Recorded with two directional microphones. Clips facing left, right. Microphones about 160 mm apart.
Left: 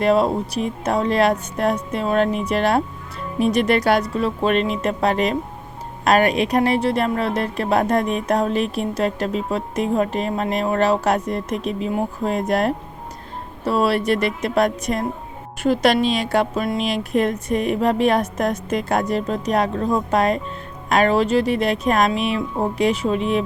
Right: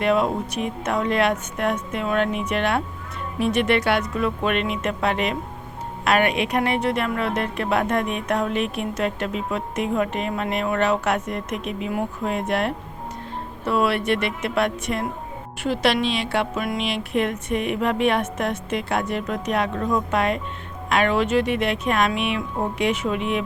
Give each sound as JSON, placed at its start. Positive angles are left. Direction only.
{"t": 0.0, "sound": "a woman's voice", "side_deg": 35}